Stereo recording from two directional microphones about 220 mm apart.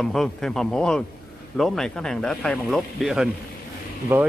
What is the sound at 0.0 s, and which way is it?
Speech, centre (ahead or behind).